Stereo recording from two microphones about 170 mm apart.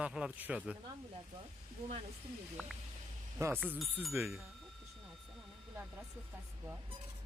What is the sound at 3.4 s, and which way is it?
Speech, 15° right (ahead or behind).